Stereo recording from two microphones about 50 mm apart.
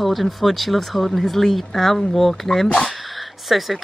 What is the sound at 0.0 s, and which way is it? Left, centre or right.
Speech, centre.